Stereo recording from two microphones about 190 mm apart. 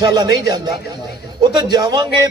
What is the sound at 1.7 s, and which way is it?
Speech, 20° right (ahead or behind).